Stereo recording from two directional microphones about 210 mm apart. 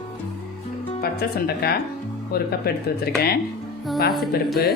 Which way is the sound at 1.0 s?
45° left (ahead or behind).